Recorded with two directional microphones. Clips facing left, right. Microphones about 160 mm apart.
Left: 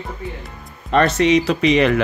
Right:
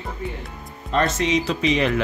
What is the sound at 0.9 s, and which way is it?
Speech, 65° left (ahead or behind).